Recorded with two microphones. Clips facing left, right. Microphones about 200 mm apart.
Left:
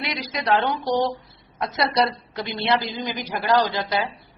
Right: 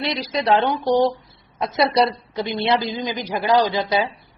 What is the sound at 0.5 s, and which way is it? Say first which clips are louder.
A woman's voice: right 3 dB; 20° right (ahead or behind).